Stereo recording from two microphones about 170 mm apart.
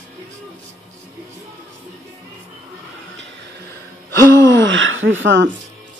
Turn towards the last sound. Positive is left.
turn(degrees=-90)